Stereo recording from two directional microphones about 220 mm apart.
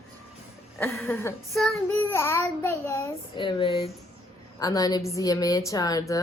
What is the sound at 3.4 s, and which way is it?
A woman's voice, 25° left (ahead or behind).